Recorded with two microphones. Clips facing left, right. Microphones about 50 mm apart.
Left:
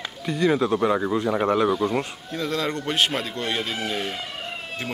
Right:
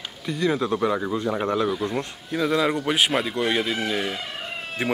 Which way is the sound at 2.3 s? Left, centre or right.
Centre.